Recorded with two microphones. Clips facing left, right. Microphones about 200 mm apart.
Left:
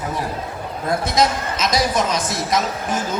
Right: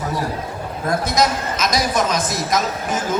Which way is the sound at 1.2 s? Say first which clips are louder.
Left 1 dB; 30° left (ahead or behind).